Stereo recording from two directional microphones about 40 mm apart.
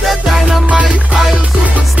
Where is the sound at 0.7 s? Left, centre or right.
Right.